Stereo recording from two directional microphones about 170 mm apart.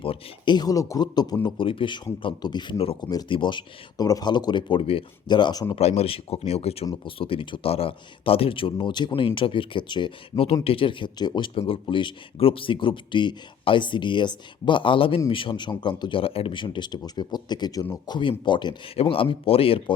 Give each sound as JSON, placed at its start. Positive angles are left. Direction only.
{"t": 0.0, "sound": "speech", "side_deg": 30}
{"t": 5.7, "sound": "speech", "side_deg": 40}